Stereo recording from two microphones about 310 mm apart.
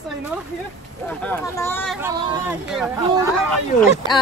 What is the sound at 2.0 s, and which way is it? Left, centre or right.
Speech, centre.